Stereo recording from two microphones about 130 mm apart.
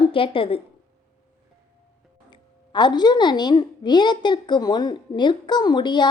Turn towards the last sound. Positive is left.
turn(degrees=35)  # may be behind; listen again after turning